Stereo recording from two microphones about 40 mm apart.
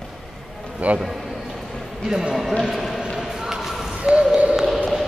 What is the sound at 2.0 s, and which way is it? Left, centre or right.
Speech, centre.